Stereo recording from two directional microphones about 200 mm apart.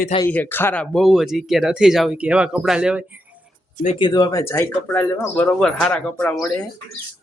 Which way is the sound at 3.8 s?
25° left (ahead or behind).